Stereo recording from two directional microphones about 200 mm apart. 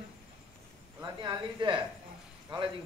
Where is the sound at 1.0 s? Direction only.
20° right (ahead or behind).